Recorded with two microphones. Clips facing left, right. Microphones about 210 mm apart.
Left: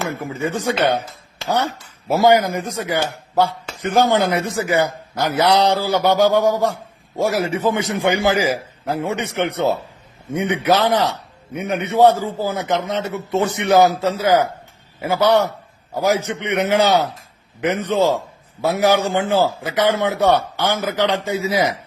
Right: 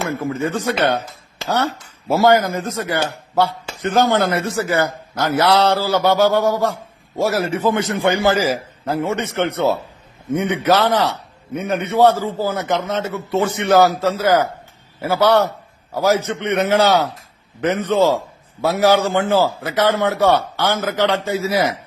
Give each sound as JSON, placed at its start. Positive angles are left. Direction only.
{"t": 0.0, "sound": "a man's voice", "side_deg": 15}